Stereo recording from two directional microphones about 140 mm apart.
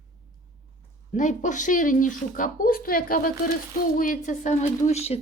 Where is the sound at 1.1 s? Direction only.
60° left (ahead or behind); by 3.3 s 90° left.